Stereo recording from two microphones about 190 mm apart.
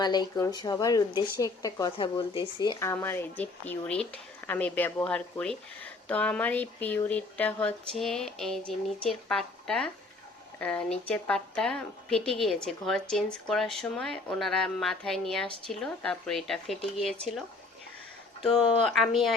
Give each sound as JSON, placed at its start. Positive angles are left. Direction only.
{"t": 0.0, "sound": "a woman's voice", "side_deg": 20}
{"t": 18.4, "sound": "a woman's voice", "side_deg": 0}